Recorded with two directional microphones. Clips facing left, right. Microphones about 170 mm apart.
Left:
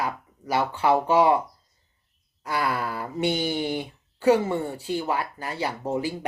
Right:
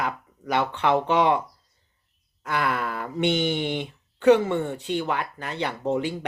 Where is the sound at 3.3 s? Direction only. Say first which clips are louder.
Right 2 dB; 35° left (ahead or behind).